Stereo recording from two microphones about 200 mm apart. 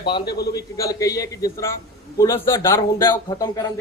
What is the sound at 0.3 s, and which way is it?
Speech, 50° left (ahead or behind).